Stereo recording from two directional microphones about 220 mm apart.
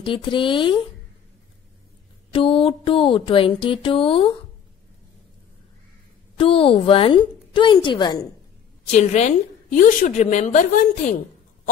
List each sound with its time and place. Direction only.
0.0 s a woman's voice: 20° left (ahead or behind)
2.3 s a woman's voice: 25° left (ahead or behind)
6.3 s a woman's voice: 25° left (ahead or behind)
8.9 s a woman's voice: 30° left (ahead or behind)